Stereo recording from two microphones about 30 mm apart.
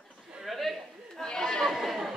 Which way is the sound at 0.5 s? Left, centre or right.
Centre.